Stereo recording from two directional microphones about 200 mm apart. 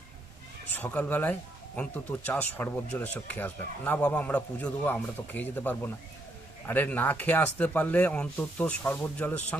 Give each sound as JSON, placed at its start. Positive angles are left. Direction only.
{"t": 0.7, "sound": "speech", "side_deg": 10}